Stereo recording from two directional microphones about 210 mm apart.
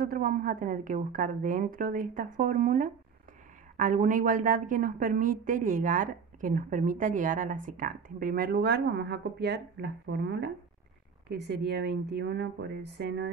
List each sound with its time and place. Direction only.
0.0 s a woman's voice: 40° right (ahead or behind)